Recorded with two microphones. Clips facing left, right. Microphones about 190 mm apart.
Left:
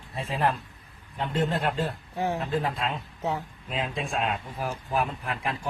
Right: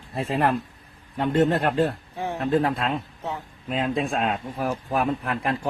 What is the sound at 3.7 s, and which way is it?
Speech, 45° right (ahead or behind).